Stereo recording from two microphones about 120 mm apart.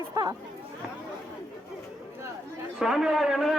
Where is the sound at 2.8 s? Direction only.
5° right (ahead or behind).